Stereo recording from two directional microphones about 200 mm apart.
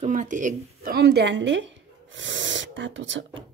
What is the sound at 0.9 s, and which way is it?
Speech, 55° right (ahead or behind).